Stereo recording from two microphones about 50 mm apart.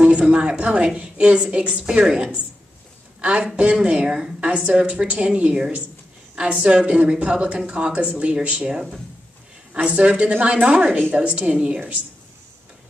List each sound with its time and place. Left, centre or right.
0.0 s a woman's voice: right
3.2 s a woman's voice: right